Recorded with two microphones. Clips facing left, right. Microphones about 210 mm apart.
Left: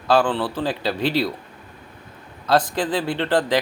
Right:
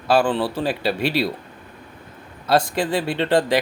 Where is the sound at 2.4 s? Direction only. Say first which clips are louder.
Even; 10° right (ahead or behind).